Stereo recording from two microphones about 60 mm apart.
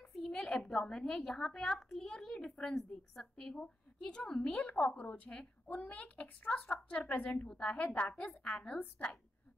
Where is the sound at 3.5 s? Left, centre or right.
Left.